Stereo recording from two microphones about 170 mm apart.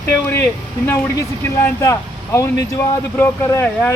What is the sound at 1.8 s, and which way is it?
Speech, 15° left (ahead or behind).